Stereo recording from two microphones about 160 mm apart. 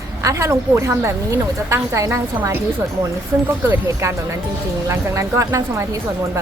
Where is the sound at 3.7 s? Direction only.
15° right (ahead or behind).